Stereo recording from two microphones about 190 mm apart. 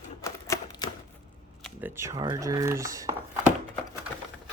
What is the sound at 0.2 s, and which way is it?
Typewriter, 15° left (ahead or behind).